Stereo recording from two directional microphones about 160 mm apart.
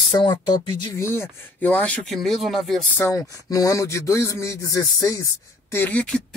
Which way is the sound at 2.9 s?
20° left (ahead or behind).